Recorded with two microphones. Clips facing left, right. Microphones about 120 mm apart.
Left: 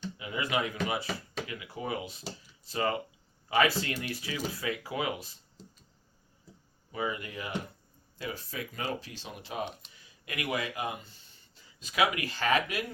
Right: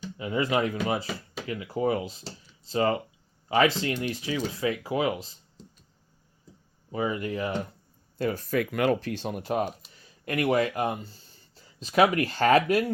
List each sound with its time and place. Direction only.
0.2 s speech: 35° right (ahead or behind)
5.6 s a sound: centre (ahead or behind)
6.9 s speech: 30° right (ahead or behind)
8.2 s a man's voice: 50° right (ahead or behind)
8.5 s speech: 70° right (ahead or behind); by 9.6 s 50° right (ahead or behind)
10.2 s a man's voice: 40° right (ahead or behind)
11.0 s speech: 35° right (ahead or behind)